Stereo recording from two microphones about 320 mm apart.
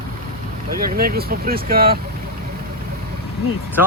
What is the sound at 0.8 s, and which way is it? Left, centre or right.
Speech, right.